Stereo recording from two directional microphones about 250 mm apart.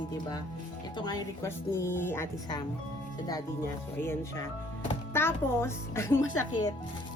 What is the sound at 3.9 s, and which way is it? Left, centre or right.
Speech, centre.